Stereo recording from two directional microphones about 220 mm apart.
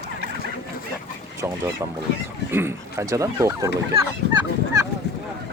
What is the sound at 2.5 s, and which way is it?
Speech, 10° right (ahead or behind).